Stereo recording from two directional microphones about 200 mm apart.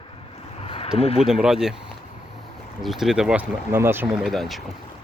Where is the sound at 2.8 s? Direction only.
Centre (ahead or behind).